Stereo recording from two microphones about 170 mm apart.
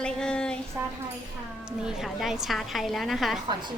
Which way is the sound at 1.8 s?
5° right (ahead or behind).